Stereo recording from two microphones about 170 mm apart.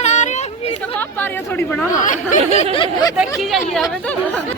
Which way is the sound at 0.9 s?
10° left (ahead or behind).